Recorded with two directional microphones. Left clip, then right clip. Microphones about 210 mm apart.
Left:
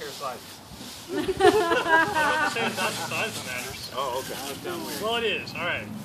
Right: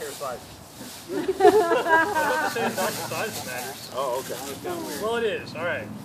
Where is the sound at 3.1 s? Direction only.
Centre (ahead or behind).